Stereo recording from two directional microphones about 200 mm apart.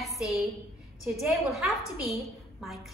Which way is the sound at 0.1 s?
15° left (ahead or behind).